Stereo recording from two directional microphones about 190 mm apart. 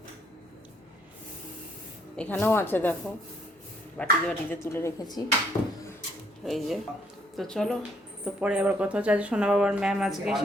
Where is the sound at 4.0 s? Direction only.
10° left (ahead or behind).